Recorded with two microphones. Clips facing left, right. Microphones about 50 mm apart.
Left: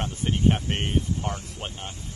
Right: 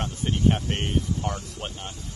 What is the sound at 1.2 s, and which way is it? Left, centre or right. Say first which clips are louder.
Speech: right 1 dB; left.